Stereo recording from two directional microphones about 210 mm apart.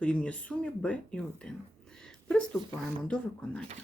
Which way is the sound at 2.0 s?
5° left (ahead or behind).